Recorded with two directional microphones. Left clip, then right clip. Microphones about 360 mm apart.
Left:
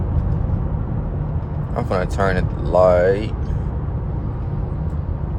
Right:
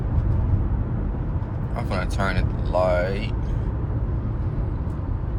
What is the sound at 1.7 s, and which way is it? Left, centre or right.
Speech, left.